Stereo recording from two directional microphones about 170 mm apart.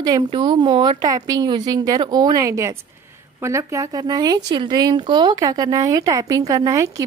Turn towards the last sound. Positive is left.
turn(degrees=-20)  # may be behind; listen again after turning